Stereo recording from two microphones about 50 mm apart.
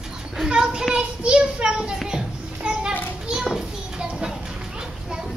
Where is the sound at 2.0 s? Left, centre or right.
Centre.